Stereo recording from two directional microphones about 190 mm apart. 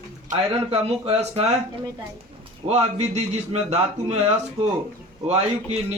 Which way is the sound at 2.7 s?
35° right (ahead or behind).